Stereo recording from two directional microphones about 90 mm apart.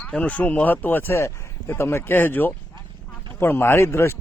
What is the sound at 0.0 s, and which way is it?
Speech, 15° left (ahead or behind).